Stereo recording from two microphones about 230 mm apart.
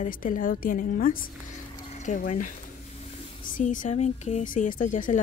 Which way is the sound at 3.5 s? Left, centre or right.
Left.